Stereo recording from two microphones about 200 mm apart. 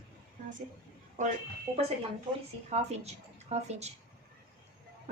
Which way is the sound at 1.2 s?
40° right (ahead or behind).